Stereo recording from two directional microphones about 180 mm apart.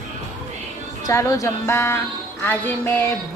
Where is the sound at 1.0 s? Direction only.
15° left (ahead or behind).